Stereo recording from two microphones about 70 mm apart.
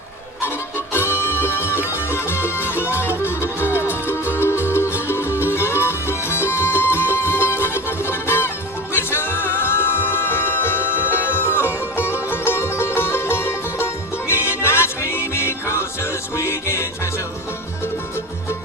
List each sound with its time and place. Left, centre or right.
0.9 s music: left